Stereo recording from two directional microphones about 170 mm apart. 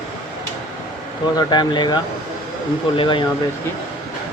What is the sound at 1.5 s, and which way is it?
Speech, 25° left (ahead or behind).